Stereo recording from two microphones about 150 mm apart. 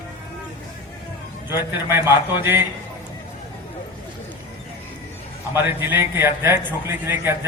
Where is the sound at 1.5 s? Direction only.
15° right (ahead or behind).